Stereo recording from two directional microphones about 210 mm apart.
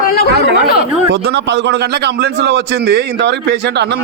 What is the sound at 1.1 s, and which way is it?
A man's voice, 55° right (ahead or behind).